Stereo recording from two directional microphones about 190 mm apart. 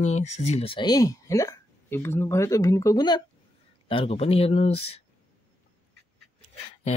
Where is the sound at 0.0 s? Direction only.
35° left (ahead or behind); by 3.2 s 20° left (ahead or behind).